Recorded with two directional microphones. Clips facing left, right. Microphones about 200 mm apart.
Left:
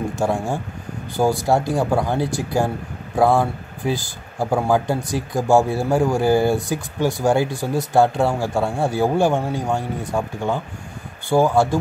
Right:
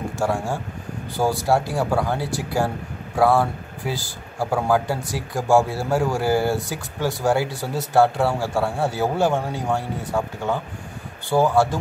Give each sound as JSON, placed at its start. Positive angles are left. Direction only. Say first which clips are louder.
{"t": 0.2, "sound": "speech", "louder": "left 1 dB", "side_deg": 20}